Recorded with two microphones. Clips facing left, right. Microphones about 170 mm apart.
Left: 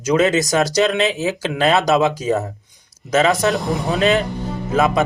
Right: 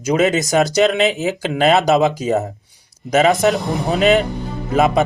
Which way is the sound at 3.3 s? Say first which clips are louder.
Right 2 dB; centre (ahead or behind).